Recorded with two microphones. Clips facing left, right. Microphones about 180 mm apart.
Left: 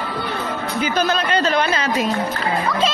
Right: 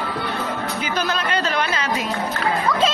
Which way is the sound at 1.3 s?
30° left (ahead or behind).